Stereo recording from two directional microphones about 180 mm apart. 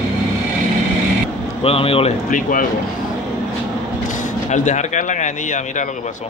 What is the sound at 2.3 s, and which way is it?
Speech, 50° left (ahead or behind).